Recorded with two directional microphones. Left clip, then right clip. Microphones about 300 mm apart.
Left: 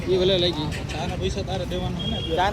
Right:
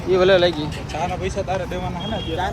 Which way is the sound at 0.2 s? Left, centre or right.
Centre.